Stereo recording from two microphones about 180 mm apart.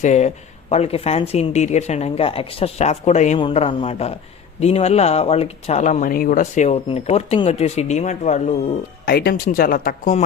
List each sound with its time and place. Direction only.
0.0 s speech: 40° left (ahead or behind)
9.0 s speech: 60° left (ahead or behind)